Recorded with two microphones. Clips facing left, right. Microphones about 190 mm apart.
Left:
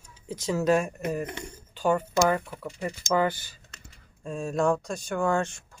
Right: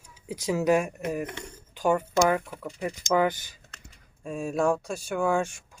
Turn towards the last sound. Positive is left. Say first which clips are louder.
# even
turn(degrees=-10)  # may be behind; listen again after turning